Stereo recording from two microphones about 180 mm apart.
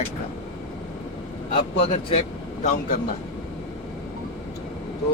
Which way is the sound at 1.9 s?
30° left (ahead or behind).